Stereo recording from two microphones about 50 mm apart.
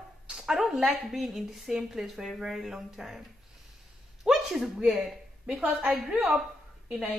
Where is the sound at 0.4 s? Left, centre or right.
Centre.